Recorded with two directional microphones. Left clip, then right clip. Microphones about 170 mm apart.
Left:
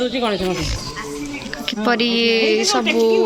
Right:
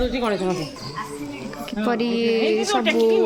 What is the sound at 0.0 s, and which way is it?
Speech, 45° left (ahead or behind).